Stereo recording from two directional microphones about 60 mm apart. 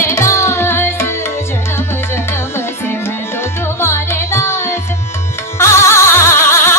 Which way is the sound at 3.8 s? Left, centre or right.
Left.